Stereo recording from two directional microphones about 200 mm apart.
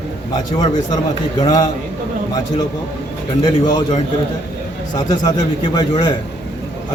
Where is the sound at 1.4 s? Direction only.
20° left (ahead or behind).